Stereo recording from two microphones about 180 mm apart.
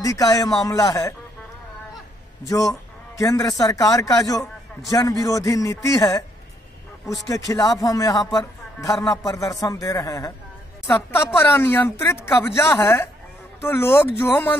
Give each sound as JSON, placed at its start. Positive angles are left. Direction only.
{"t": 0.0, "sound": "a man's voice", "side_deg": 20}
{"t": 2.4, "sound": "a man's voice", "side_deg": 20}
{"t": 7.2, "sound": "a man's voice", "side_deg": 20}